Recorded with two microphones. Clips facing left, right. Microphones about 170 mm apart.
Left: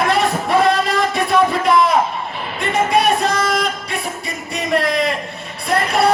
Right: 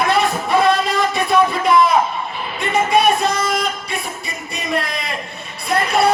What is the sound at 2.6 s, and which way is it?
Music, 90° left.